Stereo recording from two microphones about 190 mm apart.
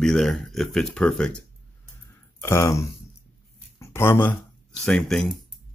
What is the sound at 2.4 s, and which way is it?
Speech, 15° left (ahead or behind).